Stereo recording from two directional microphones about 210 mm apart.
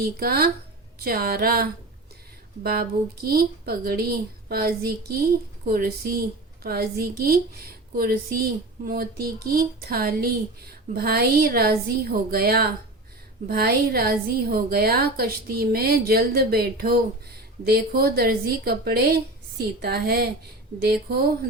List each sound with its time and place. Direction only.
0.0 s a woman's voice: 45° right (ahead or behind)
2.6 s a woman's voice: 45° right (ahead or behind)